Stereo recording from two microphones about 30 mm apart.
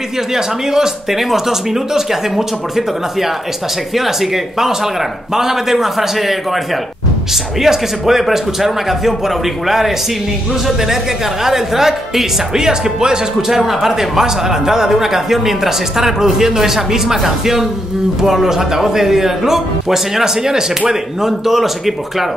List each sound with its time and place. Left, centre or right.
0.3 s a man's voice: centre
7.6 s a man's voice: centre
11.4 s a man's voice: centre
13.5 s a man's voice: centre